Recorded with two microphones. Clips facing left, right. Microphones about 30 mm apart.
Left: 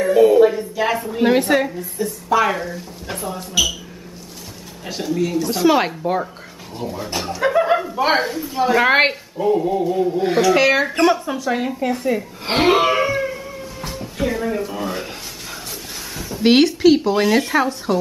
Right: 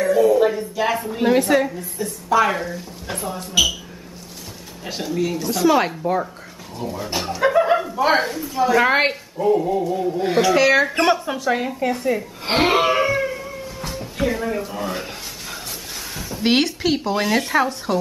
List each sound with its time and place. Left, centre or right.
0.0 s a sound: left
0.4 s a woman's voice: centre
1.2 s a woman's voice: centre
4.8 s a woman's voice: centre
5.5 s speech: centre
7.1 s chuckle: centre
7.9 s speech: centre
8.2 s a woman's voice: centre
8.5 s a woman's voice: centre
9.4 s a woman's voice: centre
11.0 s speech: centre
16.2 s a woman's voice: centre